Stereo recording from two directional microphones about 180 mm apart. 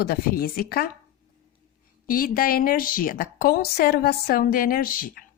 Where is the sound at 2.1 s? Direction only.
55° left (ahead or behind).